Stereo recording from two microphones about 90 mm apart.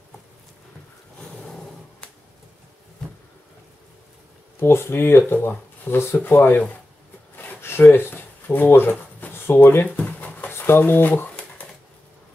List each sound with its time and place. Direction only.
1.3 s vehicle: 5° left (ahead or behind)
4.6 s speech: 25° left (ahead or behind)
7.3 s a sound: 25° left (ahead or behind)
10.5 s speech: 25° left (ahead or behind)